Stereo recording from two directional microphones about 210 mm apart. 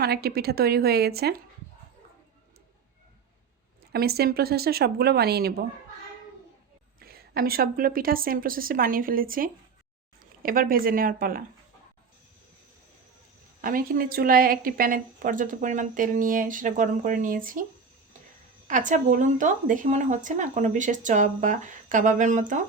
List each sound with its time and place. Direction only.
0.0 s a woman's voice: 50° right (ahead or behind)
3.9 s a woman's voice: 50° right (ahead or behind)
7.0 s a woman's voice: 45° right (ahead or behind)
13.6 s a woman's voice: 40° right (ahead or behind)
18.7 s a woman's voice: 40° right (ahead or behind)